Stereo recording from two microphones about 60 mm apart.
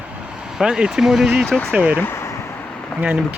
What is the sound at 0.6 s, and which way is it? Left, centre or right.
Speech, centre.